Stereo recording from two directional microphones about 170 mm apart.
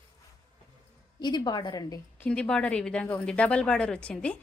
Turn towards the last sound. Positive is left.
turn(degrees=5)  # may be behind; listen again after turning